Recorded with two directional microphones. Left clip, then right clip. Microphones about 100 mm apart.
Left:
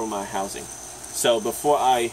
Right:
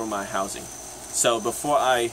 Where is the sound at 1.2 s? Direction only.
20° right (ahead or behind).